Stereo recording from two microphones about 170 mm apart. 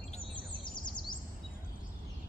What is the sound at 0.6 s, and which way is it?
Bird vocalization, 25° left (ahead or behind).